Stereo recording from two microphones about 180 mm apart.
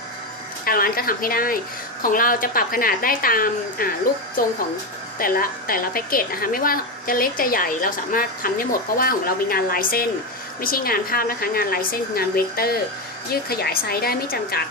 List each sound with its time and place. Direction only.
0.6 s a woman's voice: 55° left (ahead or behind)